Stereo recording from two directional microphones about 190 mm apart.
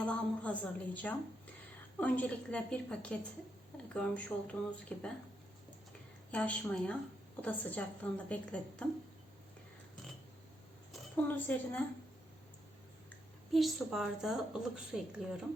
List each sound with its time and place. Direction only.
0.0 s a woman's voice: 5° left (ahead or behind)
6.3 s a woman's voice: 10° left (ahead or behind)
11.3 s a woman's voice: 10° left (ahead or behind)
13.5 s a woman's voice: centre (ahead or behind)